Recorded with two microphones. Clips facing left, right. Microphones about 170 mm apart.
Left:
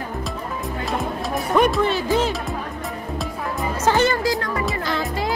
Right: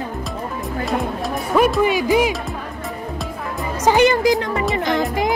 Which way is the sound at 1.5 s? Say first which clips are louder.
Right 2 dB; centre (ahead or behind).